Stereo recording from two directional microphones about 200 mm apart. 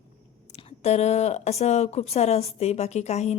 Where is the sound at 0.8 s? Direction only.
30° left (ahead or behind).